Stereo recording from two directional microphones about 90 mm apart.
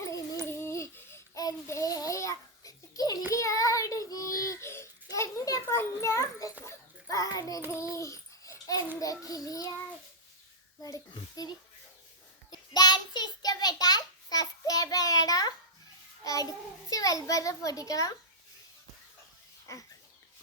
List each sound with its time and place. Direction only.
0.0 s dog: 35° left (ahead or behind)
0.4 s a sound: 30° left (ahead or behind)
1.4 s babbling: 40° left (ahead or behind)
3.3 s child singing: 35° left (ahead or behind)
7.7 s babbling: 35° left (ahead or behind)
9.0 s child singing: 40° left (ahead or behind)
11.1 s a child's voice: 50° left (ahead or behind)
12.5 s child singing: 50° left (ahead or behind)
16.2 s a sound: 40° left (ahead or behind)